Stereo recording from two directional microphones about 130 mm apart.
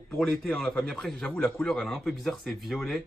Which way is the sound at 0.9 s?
Centre (ahead or behind).